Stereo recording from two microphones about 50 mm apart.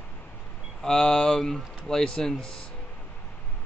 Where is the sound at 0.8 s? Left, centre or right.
Centre.